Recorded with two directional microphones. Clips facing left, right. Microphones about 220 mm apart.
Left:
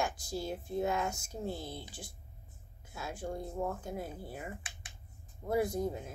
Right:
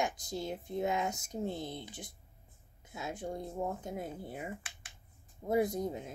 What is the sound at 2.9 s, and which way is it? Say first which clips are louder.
Speech: even; 20° right (ahead or behind).